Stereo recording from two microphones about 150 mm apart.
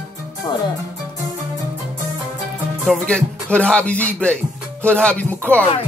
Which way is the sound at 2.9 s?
5° left (ahead or behind).